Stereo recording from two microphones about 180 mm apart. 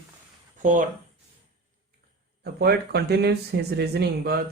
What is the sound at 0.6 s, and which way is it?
Speech, 45° right (ahead or behind).